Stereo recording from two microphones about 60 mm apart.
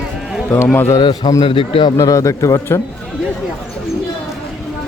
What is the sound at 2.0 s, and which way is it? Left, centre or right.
Speech, left.